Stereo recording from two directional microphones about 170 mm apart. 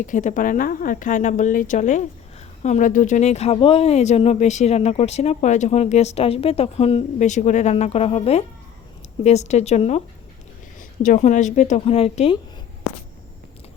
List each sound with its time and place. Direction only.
0.0 s speech: 50° left (ahead or behind)
10.8 s speech: 50° left (ahead or behind); by 12.4 s 35° left (ahead or behind)